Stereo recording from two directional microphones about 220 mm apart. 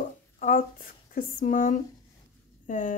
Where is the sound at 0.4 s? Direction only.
40° left (ahead or behind).